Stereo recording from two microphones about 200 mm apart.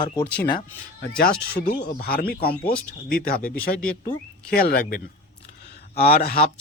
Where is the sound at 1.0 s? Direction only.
50° left (ahead or behind).